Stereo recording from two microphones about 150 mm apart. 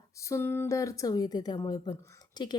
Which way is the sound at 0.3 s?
15° left (ahead or behind).